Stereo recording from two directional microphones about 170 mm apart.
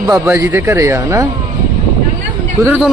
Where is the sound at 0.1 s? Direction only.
15° right (ahead or behind).